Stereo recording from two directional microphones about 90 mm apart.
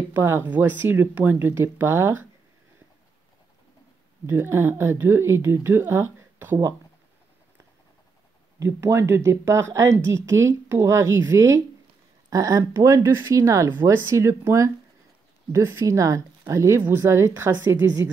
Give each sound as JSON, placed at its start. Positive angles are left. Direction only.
{"t": 0.1, "sound": "speech", "side_deg": -25}
{"t": 4.3, "sound": "speech", "side_deg": -25}
{"t": 8.5, "sound": "speech", "side_deg": -30}